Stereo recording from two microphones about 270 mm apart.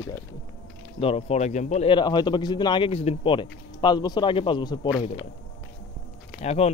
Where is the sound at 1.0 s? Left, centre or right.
Left.